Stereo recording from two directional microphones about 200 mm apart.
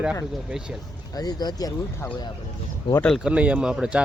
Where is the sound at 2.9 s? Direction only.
5° left (ahead or behind).